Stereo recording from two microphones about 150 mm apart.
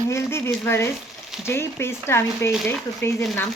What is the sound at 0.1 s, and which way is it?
Speech, 15° left (ahead or behind).